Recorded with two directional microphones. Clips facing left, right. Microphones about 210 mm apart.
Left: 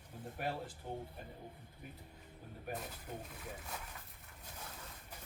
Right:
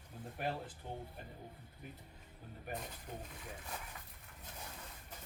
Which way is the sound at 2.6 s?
5° left (ahead or behind).